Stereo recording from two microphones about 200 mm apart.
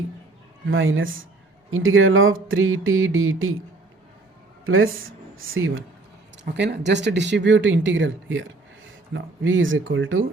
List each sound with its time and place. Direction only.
0.7 s speech: 80° right
4.6 s speech: 90° right
6.5 s speech: 60° right (ahead or behind); by 10.2 s 75° right (ahead or behind)